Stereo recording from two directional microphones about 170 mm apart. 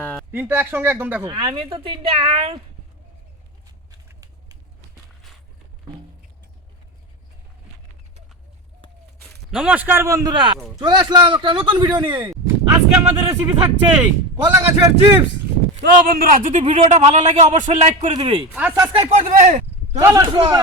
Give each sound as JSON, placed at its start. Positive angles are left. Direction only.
{"t": 0.0, "sound": "a sound", "side_deg": 5}
{"t": 0.3, "sound": "speech", "side_deg": -10}
{"t": 1.2, "sound": "speech", "side_deg": -30}
{"t": 4.1, "sound": "a sound", "side_deg": -20}
{"t": 9.5, "sound": "speech", "side_deg": -5}
{"t": 16.3, "sound": "a man's voice", "side_deg": -50}
{"t": 18.1, "sound": "speech", "side_deg": -25}
{"t": 18.5, "sound": "speech", "side_deg": -5}
{"t": 18.8, "sound": "speech", "side_deg": -30}
{"t": 19.3, "sound": "a man's voice", "side_deg": -45}
{"t": 20.0, "sound": "speech", "side_deg": -15}
{"t": 20.2, "sound": "speech", "side_deg": -30}